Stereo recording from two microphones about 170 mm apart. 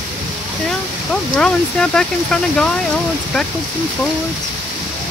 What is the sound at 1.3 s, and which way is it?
Speech, 5° left (ahead or behind).